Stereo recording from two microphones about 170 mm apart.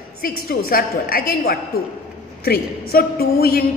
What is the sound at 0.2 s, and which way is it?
A woman's voice, 60° left (ahead or behind).